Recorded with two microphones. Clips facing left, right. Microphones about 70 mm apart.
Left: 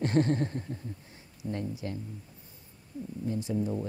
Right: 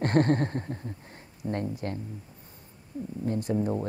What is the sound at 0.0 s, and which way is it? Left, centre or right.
Speech, right.